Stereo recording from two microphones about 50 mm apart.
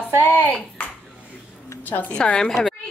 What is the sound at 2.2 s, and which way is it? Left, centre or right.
Speech, centre.